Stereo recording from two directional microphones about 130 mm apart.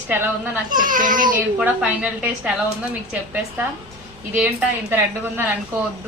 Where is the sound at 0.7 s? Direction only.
90° right.